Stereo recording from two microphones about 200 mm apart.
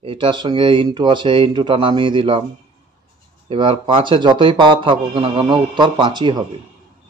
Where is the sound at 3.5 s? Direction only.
25° right (ahead or behind).